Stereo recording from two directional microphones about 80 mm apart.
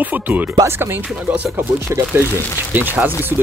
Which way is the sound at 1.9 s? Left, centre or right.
Right.